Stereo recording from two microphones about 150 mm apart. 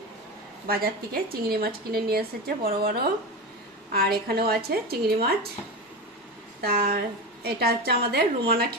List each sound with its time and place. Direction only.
0.7 s a woman's voice: 90° right
6.6 s a woman's voice: 90° right